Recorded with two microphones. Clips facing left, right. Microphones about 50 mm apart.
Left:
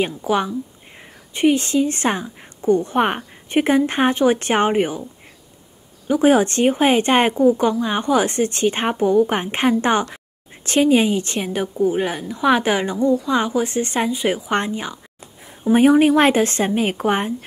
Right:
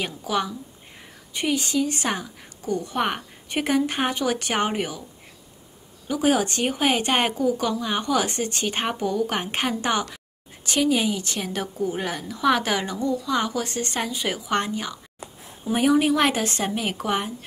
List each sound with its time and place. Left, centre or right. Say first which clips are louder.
0.0 s speech: left 6 dB; left
6.0 s a woman's voice: left 7 dB; left
11.4 s a woman's voice: left 7 dB; left